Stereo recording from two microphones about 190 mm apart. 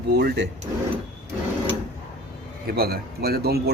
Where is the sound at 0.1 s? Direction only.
55° right (ahead or behind).